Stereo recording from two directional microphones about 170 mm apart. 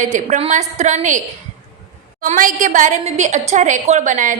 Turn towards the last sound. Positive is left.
turn(degrees=-45)  # may be behind; listen again after turning